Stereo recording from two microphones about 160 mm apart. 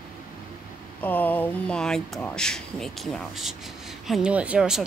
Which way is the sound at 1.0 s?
10° left (ahead or behind).